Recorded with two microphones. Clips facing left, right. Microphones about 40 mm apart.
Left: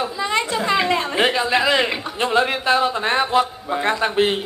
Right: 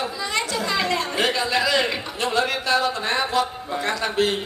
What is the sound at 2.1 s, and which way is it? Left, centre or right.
A man's voice, left.